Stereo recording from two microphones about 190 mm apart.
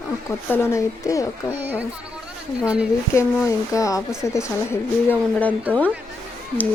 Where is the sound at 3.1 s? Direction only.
15° left (ahead or behind).